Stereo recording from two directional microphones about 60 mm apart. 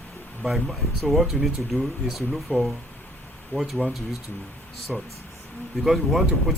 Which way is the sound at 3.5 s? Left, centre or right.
Left.